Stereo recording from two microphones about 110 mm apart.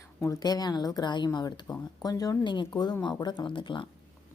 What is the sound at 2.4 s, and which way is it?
Speech, 40° left (ahead or behind).